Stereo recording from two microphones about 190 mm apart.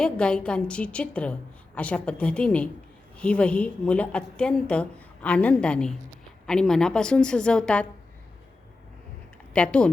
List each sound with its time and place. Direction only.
0.0 s a woman's voice: 5° left (ahead or behind)
9.5 s speech: 5° left (ahead or behind)